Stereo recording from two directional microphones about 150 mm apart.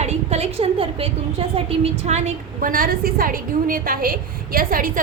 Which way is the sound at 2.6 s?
65° right (ahead or behind).